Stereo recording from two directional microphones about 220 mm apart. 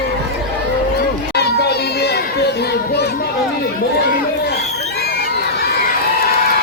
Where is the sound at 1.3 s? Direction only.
45° left (ahead or behind).